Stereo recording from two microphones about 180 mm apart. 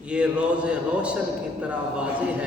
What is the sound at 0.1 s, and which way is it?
A man's voice, 5° right (ahead or behind).